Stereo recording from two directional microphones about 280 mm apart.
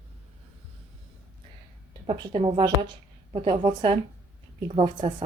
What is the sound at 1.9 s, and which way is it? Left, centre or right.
A woman's voice, centre.